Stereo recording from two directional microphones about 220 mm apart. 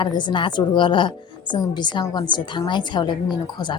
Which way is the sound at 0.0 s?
20° left (ahead or behind).